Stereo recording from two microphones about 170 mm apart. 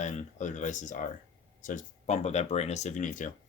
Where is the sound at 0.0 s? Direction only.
45° left (ahead or behind).